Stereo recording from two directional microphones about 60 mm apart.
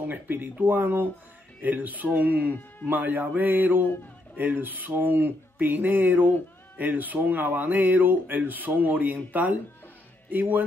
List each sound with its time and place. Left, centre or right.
0.0 s speech: right